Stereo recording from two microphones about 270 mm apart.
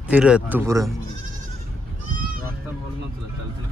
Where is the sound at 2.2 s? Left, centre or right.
Right.